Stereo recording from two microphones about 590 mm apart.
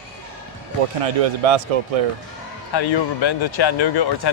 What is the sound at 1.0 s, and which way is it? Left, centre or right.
Speech, right.